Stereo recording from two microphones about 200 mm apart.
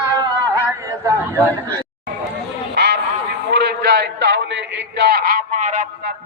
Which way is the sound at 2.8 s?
55° right (ahead or behind).